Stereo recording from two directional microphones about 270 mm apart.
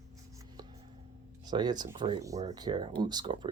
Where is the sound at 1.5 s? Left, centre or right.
Centre.